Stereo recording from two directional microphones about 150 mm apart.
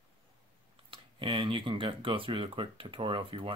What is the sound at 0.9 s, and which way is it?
Speech, 35° right (ahead or behind).